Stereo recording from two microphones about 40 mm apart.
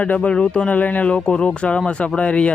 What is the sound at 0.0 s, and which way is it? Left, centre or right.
Speech, left.